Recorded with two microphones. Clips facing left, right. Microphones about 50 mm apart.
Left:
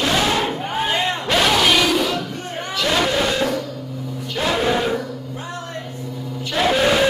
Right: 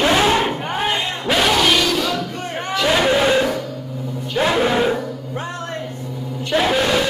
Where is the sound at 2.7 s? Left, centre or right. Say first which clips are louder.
Right 3 dB; centre.